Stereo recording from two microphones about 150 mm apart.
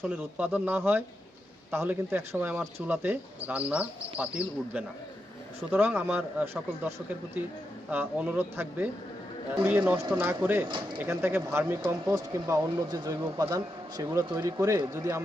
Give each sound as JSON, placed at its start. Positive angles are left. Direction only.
{"t": 0.0, "sound": "a man's voice", "side_deg": -10}